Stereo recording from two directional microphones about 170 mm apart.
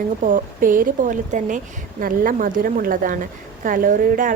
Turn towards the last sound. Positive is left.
turn(degrees=-50)  # may be behind; listen again after turning